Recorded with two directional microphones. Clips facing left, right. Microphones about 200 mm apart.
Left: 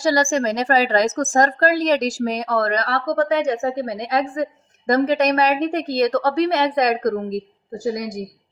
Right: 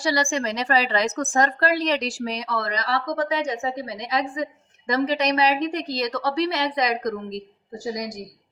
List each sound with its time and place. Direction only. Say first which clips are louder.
0.0 s a woman's voice: left 5 dB; 45° left (ahead or behind)